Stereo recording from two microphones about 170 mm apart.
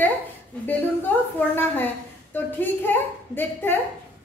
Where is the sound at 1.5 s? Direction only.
10° left (ahead or behind).